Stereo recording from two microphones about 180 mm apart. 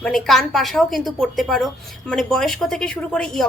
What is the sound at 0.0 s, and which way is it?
A woman's voice, centre (ahead or behind).